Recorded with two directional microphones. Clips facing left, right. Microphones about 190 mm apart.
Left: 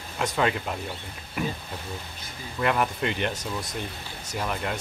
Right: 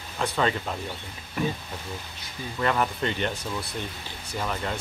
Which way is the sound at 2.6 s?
5° left (ahead or behind).